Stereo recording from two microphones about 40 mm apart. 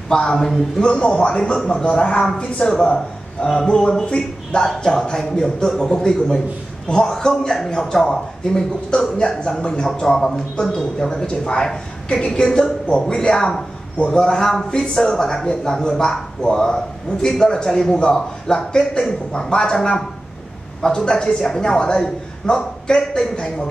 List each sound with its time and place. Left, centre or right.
0.1 s a man's voice: centre
4.0 s a man's voice: left